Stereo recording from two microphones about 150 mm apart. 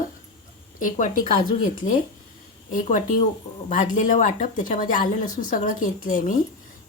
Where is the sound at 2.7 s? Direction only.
60° left (ahead or behind).